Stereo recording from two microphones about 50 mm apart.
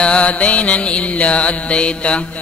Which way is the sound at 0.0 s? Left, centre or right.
Left.